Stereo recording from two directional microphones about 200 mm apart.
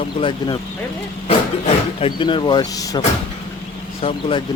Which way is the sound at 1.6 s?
25° left (ahead or behind).